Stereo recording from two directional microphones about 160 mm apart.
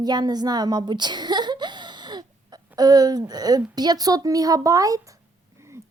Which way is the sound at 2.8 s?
25° right (ahead or behind).